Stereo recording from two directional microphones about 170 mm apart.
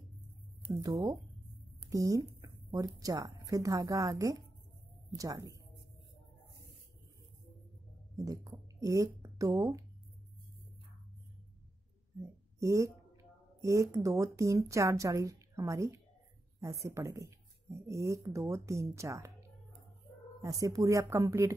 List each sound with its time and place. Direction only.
1.9 s speech: 20° right (ahead or behind)
8.2 s speech: 20° right (ahead or behind)
12.2 s speech: 20° right (ahead or behind)
20.4 s speech: 20° right (ahead or behind)